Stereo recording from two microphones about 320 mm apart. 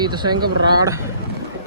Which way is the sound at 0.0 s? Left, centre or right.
Centre.